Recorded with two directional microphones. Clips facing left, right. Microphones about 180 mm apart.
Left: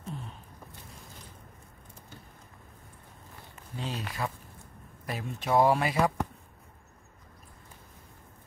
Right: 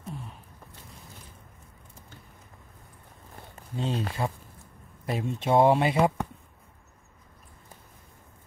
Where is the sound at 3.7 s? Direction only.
25° right (ahead or behind).